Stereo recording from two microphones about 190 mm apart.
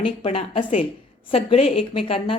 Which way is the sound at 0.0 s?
30° left (ahead or behind).